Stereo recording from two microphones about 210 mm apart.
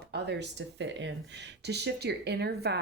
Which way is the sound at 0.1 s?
55° right (ahead or behind).